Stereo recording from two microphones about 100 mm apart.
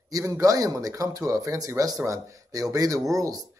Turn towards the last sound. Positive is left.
turn(degrees=-35)  # may be behind; listen again after turning